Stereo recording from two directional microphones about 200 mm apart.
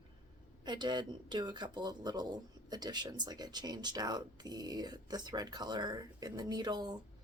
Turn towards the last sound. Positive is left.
turn(degrees=-20)  # may be behind; listen again after turning